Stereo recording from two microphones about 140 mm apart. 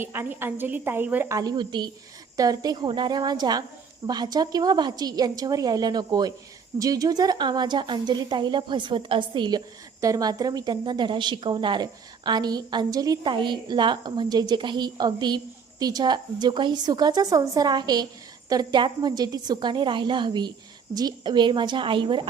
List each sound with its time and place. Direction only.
0.0 s a woman's voice: 15° right (ahead or behind)
1.4 s a woman's voice: 30° right (ahead or behind)